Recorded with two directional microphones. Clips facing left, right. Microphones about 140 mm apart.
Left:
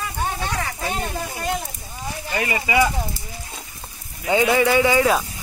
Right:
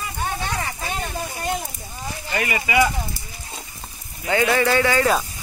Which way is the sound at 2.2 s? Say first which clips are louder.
Left 1 dB; 20° left (ahead or behind).